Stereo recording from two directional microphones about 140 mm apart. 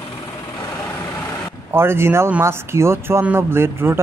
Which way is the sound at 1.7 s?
15° right (ahead or behind).